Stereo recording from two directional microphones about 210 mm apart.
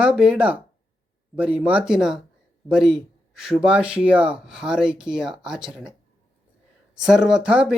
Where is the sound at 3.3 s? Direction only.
5° right (ahead or behind).